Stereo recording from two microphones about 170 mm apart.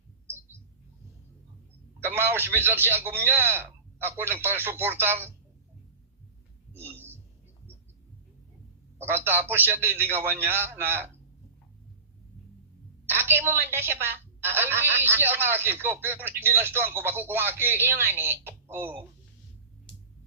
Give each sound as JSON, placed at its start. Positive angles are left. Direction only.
{"t": 2.0, "sound": "a woman's voice", "side_deg": -15}
{"t": 6.7, "sound": "a sound", "side_deg": -10}
{"t": 9.0, "sound": "a woman's voice", "side_deg": -15}
{"t": 13.1, "sound": "a woman's voice", "side_deg": -10}